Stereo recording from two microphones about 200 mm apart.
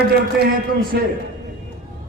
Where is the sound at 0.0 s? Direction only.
50° right (ahead or behind).